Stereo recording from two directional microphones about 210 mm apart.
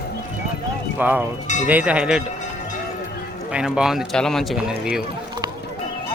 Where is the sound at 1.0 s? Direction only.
10° right (ahead or behind).